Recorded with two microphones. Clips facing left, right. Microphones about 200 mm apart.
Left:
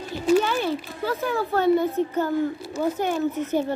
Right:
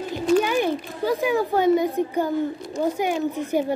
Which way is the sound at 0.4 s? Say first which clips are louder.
Right 2 dB; 15° right (ahead or behind).